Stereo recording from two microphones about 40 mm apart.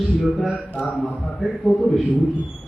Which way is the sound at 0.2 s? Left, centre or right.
Centre.